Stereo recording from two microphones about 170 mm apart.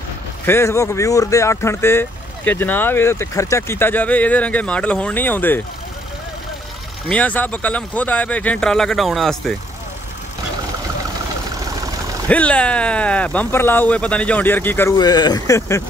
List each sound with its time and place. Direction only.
0.5 s speech: 15° left (ahead or behind)
7.1 s speech: 10° left (ahead or behind)
12.3 s speech: 10° left (ahead or behind)
15.0 s speech: 25° left (ahead or behind)